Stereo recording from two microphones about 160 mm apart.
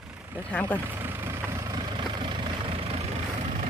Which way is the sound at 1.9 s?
30° right (ahead or behind).